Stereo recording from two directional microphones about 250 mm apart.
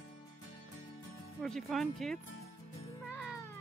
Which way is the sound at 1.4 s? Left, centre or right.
Centre.